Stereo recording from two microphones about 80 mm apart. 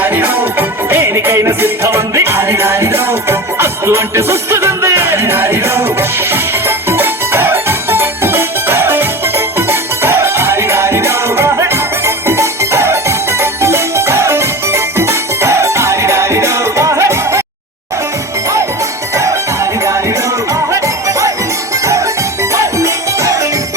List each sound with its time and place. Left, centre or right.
0.0 s music: right
19.1 s music: right